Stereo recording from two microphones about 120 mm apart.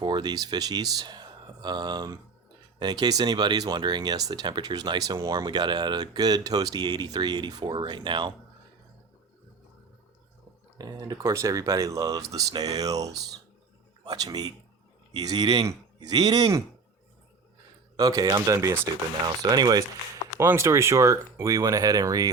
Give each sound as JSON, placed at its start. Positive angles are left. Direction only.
{"t": 0.0, "sound": "speech", "side_deg": -40}
{"t": 10.8, "sound": "a man's voice", "side_deg": -30}
{"t": 17.9, "sound": "speech", "side_deg": -30}
{"t": 20.4, "sound": "speech", "side_deg": -20}